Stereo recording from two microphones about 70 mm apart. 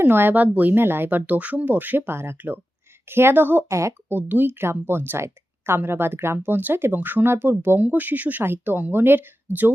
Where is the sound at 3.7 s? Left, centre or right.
Right.